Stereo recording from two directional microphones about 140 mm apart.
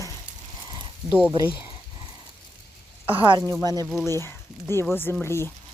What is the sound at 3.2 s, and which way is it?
Speech, 30° right (ahead or behind).